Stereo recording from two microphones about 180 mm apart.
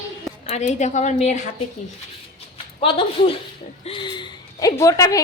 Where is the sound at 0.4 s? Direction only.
40° left (ahead or behind).